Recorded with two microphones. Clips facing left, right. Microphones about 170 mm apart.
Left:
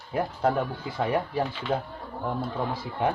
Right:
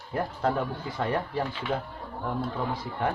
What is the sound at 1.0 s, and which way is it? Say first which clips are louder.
Speech: left 3 dB; 15° left (ahead or behind).